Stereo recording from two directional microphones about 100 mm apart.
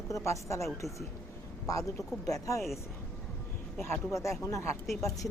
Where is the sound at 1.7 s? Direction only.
35° left (ahead or behind).